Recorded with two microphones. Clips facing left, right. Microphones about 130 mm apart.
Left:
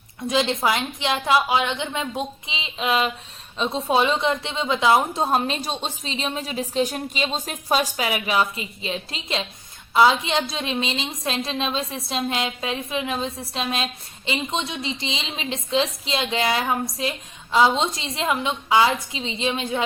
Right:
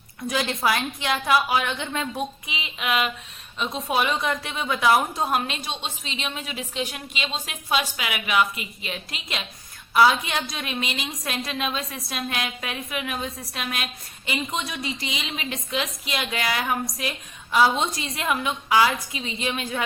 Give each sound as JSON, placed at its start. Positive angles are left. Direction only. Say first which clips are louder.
{"t": 0.3, "sound": "a woman's voice", "louder": "left 3 dB", "side_deg": 25}